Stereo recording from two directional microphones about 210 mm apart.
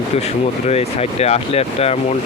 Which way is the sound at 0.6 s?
30° left (ahead or behind).